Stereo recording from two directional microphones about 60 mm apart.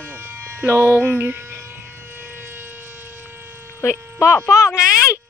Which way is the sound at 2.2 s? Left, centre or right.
Right.